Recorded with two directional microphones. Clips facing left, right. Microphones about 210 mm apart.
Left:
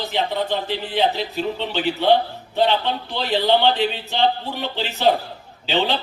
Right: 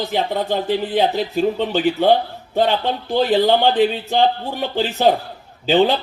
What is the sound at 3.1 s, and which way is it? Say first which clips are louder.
Speech: right 5 dB; 45° right (ahead or behind).